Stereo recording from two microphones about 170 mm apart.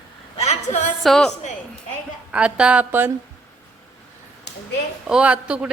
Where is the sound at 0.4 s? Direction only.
40° left (ahead or behind).